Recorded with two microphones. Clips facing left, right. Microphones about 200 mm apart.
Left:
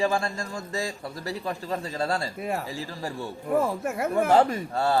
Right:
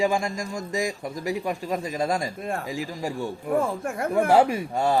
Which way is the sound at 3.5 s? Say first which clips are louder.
Left 1 dB; centre (ahead or behind).